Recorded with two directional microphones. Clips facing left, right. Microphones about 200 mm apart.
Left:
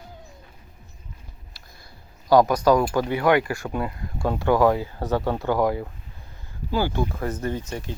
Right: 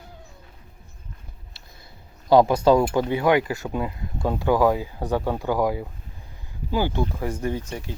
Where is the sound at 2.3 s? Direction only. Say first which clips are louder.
Right 1 dB; 25° right (ahead or behind).